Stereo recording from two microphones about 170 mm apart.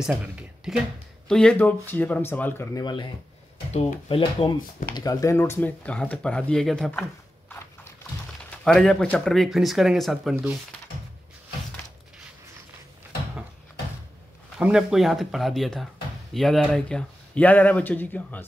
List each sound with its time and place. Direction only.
0.7 s speech: centre (ahead or behind); by 2.8 s 15° left (ahead or behind)
2.8 s speech: 25° left (ahead or behind); by 10.3 s centre (ahead or behind)
14.6 s speech: 5° right (ahead or behind)